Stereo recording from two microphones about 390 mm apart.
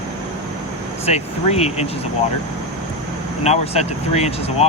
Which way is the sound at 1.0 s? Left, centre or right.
Centre.